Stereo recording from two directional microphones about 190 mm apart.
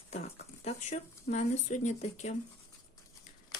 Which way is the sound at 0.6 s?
35° left (ahead or behind).